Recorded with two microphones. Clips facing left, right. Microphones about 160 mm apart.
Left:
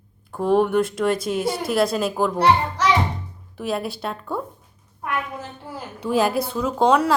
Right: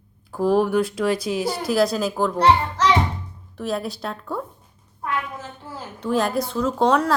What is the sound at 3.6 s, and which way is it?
Speech, centre (ahead or behind).